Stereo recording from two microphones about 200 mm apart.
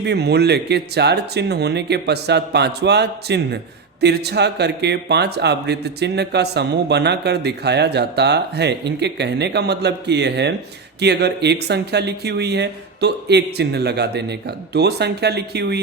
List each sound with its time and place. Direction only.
0.0 s a man's voice: 55° right (ahead or behind)